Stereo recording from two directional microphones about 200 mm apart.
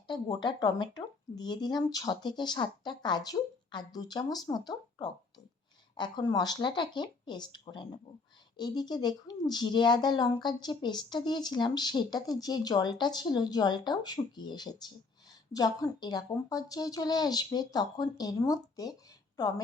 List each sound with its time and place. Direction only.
0.1 s speech: 20° left (ahead or behind)